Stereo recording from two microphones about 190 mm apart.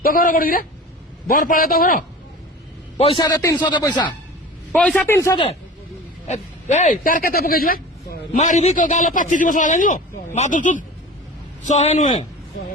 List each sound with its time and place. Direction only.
0.0 s speech: 45° left (ahead or behind)
3.2 s speech: 20° left (ahead or behind)
4.7 s a man's voice: 5° left (ahead or behind)
6.2 s a man's voice: 35° left (ahead or behind)